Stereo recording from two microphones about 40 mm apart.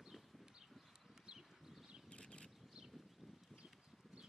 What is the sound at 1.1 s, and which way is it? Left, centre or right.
Horse, centre.